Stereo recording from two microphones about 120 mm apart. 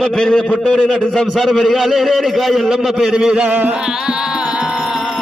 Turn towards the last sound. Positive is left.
turn(degrees=0)  # may be behind; listen again after turning